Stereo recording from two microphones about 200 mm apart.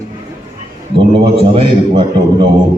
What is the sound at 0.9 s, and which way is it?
A man's voice, 25° right (ahead or behind).